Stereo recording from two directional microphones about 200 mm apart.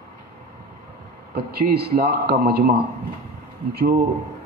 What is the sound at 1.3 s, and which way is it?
A man's voice, 50° right (ahead or behind).